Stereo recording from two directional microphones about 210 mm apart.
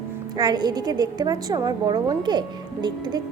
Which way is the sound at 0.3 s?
20° right (ahead or behind).